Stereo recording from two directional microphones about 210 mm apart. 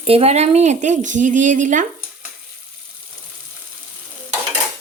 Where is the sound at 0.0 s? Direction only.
30° right (ahead or behind).